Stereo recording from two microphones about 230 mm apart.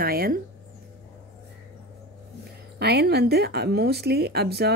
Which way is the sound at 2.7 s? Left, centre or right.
Right.